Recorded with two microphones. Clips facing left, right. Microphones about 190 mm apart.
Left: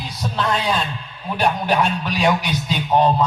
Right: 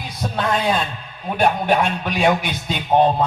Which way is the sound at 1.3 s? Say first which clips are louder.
Right 2 dB; 55° right (ahead or behind).